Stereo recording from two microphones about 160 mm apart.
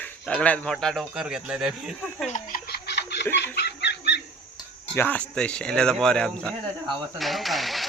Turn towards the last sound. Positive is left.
turn(degrees=0)  # may be behind; listen again after turning